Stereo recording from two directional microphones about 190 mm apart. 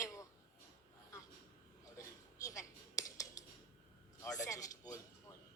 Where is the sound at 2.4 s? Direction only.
15° left (ahead or behind).